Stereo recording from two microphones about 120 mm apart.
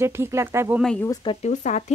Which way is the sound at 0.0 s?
20° right (ahead or behind).